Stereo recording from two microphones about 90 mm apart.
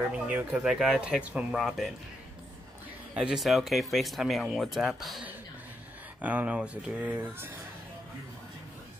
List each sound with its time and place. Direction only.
0.1 s speech: 20° right (ahead or behind)
0.7 s speech: 5° right (ahead or behind)
3.2 s speech: 5° right (ahead or behind)
6.2 s speech: 15° right (ahead or behind)
7.2 s speech: 25° right (ahead or behind)